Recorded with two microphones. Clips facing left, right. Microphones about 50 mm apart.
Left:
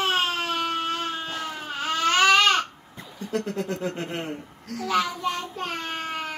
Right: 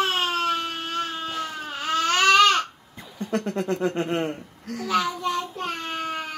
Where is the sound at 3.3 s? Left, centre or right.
Right.